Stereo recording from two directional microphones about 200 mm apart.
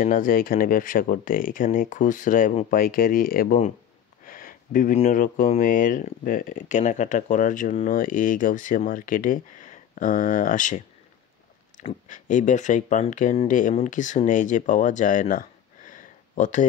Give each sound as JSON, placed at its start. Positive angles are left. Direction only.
{"t": 0.0, "sound": "speech", "side_deg": 40}
{"t": 12.1, "sound": "speech", "side_deg": 40}
{"t": 15.9, "sound": "a sound", "side_deg": 40}